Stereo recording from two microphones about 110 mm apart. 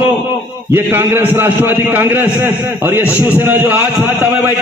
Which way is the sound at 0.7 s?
20° right (ahead or behind).